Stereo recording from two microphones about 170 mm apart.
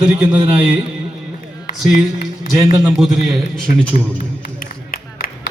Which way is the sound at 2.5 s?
20° right (ahead or behind).